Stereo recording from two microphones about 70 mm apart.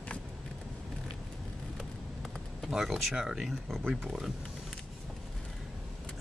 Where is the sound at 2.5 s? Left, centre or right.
Centre.